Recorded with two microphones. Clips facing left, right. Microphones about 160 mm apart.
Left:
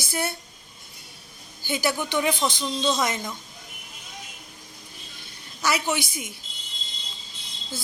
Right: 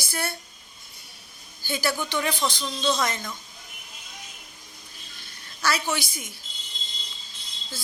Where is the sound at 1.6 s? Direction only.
20° left (ahead or behind).